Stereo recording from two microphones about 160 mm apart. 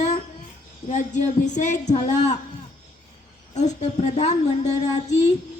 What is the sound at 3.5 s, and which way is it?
Speech, 45° left (ahead or behind).